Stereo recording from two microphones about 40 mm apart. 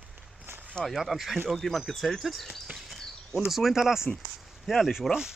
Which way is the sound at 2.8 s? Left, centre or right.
Centre.